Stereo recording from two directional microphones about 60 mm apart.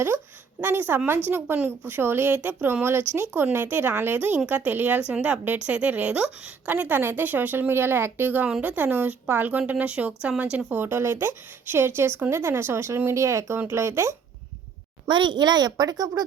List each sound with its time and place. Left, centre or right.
0.6 s a woman's voice: right
10.7 s a woman's voice: right
15.6 s speech: right